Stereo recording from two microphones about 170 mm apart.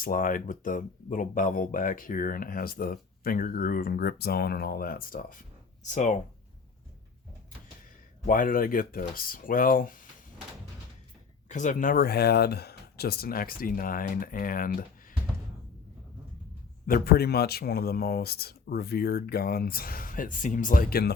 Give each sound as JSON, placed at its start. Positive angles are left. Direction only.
{"t": 0.0, "sound": "speech", "side_deg": 55}
{"t": 5.8, "sound": "speech", "side_deg": 45}
{"t": 8.3, "sound": "speech", "side_deg": 55}
{"t": 11.4, "sound": "speech", "side_deg": 45}
{"t": 16.8, "sound": "speech", "side_deg": 60}